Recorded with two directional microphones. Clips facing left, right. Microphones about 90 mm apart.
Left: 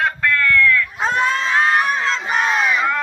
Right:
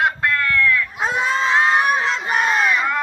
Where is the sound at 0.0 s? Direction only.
15° right (ahead or behind).